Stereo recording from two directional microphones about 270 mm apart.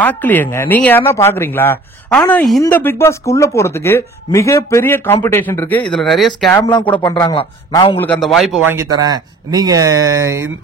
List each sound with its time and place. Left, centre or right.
0.0 s speech: centre
6.6 s speech: centre
8.0 s speech: centre